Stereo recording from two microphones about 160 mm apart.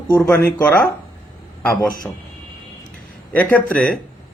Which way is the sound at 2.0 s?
10° left (ahead or behind).